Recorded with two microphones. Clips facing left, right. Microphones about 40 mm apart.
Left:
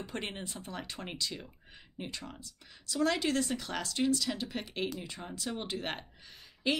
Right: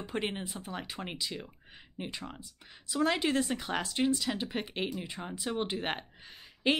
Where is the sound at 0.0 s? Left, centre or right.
Centre.